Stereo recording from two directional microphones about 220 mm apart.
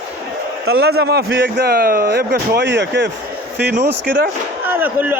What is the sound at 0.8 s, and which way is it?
Speech, 45° right (ahead or behind).